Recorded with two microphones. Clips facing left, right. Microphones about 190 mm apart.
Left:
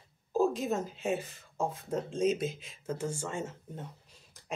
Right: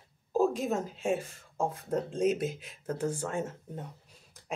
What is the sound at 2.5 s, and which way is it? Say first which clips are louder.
Speech: right 3 dB; 60° right (ahead or behind).